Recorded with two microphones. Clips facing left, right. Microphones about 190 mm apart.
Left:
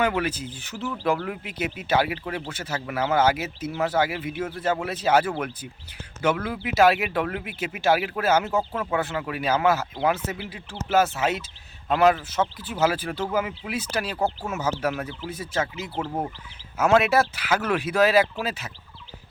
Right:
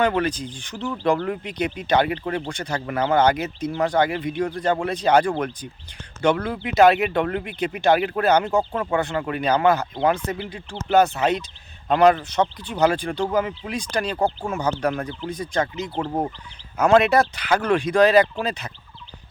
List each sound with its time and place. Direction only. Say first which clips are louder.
0.0 s speech: right 3 dB; 5° left (ahead or behind)